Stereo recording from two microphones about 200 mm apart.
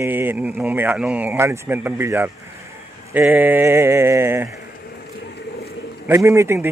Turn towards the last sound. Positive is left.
turn(degrees=-15)  # may be behind; listen again after turning